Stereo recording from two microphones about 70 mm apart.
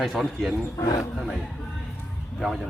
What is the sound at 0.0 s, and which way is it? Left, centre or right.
Speech, centre.